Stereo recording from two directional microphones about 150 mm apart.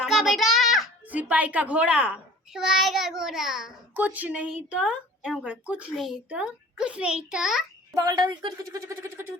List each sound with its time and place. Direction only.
0.0 s a child's voice: centre (ahead or behind)
7.9 s speech: 25° right (ahead or behind)
8.8 s a woman's voice: 20° right (ahead or behind)